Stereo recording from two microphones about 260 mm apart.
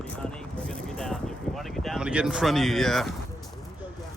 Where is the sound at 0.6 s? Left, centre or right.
Centre.